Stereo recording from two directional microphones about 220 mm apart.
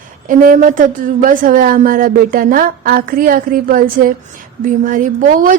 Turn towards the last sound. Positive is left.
turn(degrees=-35)  # may be behind; listen again after turning